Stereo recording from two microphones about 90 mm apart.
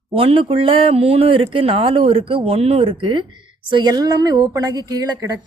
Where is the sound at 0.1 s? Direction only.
90° right; by 3.2 s 70° right (ahead or behind).